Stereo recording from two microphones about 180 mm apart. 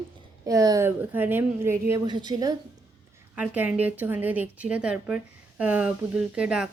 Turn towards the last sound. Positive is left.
turn(degrees=-5)  # may be behind; listen again after turning